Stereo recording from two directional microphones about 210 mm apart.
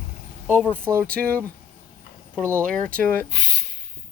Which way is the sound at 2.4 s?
10° right (ahead or behind).